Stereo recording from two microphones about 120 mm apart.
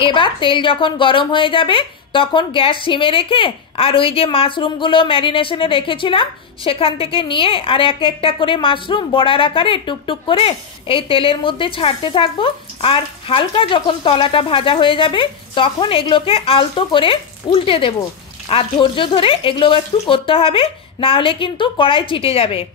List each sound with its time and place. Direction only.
0.0 s a woman's voice: 45° left (ahead or behind)